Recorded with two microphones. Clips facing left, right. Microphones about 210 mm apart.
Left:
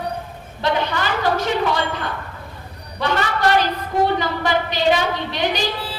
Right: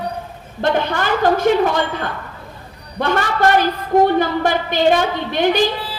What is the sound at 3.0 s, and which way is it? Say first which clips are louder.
A woman's voice: right 3 dB; 50° right (ahead or behind).